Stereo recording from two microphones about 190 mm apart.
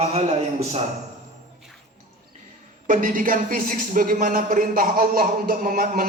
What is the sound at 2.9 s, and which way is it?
A man's voice, 45° right (ahead or behind).